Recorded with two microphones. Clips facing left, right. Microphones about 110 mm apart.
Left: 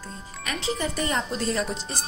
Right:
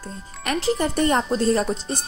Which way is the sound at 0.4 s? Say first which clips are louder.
Right 7 dB; 55° right (ahead or behind).